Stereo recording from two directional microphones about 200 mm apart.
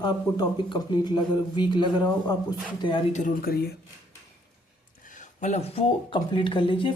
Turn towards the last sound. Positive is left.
turn(degrees=25)  # may be behind; listen again after turning